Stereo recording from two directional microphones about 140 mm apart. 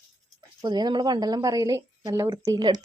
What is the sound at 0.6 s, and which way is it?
Speech, 30° right (ahead or behind).